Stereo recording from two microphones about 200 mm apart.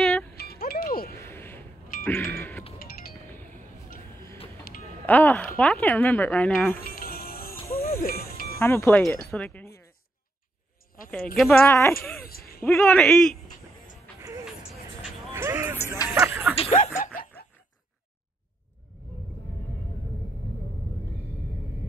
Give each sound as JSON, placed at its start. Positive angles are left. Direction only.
{"t": 0.0, "sound": "music", "side_deg": 0}
{"t": 0.4, "sound": "music", "side_deg": 50}
{"t": 1.1, "sound": "a sound", "side_deg": 10}
{"t": 2.0, "sound": "music", "side_deg": 10}
{"t": 2.8, "sound": "music", "side_deg": 45}
{"t": 3.3, "sound": "a sound", "side_deg": 10}
{"t": 5.0, "sound": "speech", "side_deg": 10}
{"t": 6.8, "sound": "music", "side_deg": 45}
{"t": 8.5, "sound": "speech", "side_deg": 10}
{"t": 11.3, "sound": "speech", "side_deg": 5}
{"t": 12.2, "sound": "speech", "side_deg": 50}
{"t": 12.6, "sound": "a man's voice", "side_deg": 5}
{"t": 15.3, "sound": "a sound", "side_deg": -15}
{"t": 16.5, "sound": "speech", "side_deg": 30}